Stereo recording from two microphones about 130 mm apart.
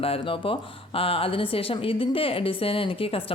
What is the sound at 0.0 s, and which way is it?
Speech, 45° left (ahead or behind).